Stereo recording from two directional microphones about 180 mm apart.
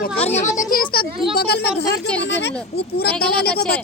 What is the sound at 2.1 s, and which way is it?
Speech, 75° left (ahead or behind).